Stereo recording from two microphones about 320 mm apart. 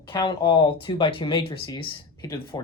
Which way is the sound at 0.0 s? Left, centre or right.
Centre.